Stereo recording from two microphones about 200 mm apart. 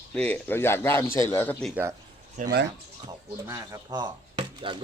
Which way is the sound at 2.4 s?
50° right (ahead or behind).